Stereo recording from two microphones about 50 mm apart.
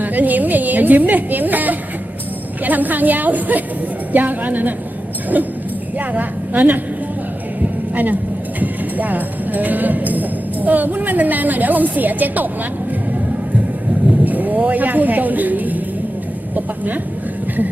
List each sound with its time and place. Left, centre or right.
0.0 s a sound: right
2.6 s a woman's voice: right
6.1 s a woman's voice: right
14.3 s a woman's voice: right